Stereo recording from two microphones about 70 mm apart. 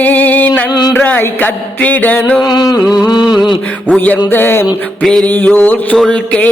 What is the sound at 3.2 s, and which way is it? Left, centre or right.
Mantra, centre.